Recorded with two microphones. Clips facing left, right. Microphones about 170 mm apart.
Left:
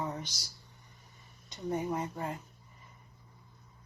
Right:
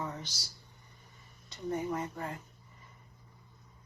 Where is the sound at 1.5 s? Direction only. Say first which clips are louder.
Left 1 dB; 15° left (ahead or behind).